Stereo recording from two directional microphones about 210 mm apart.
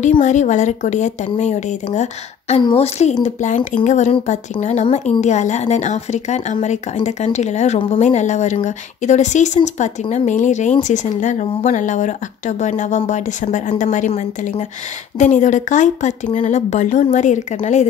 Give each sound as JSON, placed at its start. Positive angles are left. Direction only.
{"t": 0.0, "sound": "speech", "side_deg": 35}